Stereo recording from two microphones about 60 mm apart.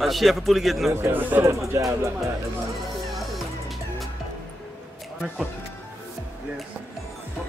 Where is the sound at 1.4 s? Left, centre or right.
Right.